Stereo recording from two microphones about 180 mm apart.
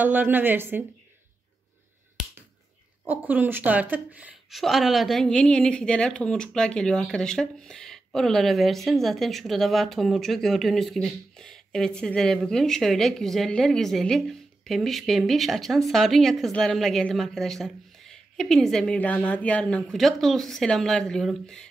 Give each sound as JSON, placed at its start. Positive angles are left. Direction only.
{"t": 0.0, "sound": "speech", "side_deg": -10}
{"t": 3.1, "sound": "a woman's voice", "side_deg": -10}